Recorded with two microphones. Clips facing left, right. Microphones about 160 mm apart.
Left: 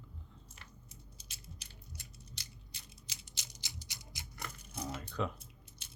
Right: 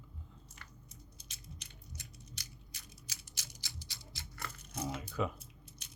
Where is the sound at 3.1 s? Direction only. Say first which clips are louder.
Left 1 dB; 20° left (ahead or behind).